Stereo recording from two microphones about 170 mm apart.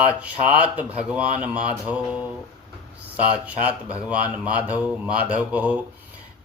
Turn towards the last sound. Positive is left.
turn(degrees=-10)  # may be behind; listen again after turning